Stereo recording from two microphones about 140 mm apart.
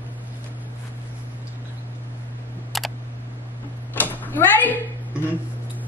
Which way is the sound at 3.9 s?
15° left (ahead or behind).